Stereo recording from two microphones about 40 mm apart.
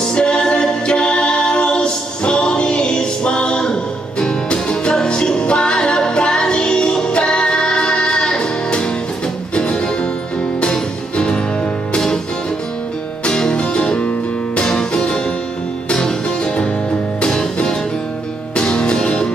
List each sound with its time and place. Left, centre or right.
0.0 s music: left
13.2 s music: centre